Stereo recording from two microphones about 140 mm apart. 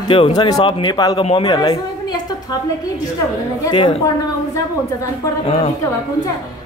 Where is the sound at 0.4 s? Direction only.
35° left (ahead or behind).